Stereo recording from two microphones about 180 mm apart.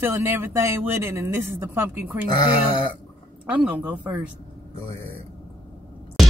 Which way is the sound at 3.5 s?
10° right (ahead or behind).